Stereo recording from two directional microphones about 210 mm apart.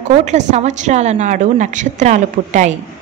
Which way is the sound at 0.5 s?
35° right (ahead or behind).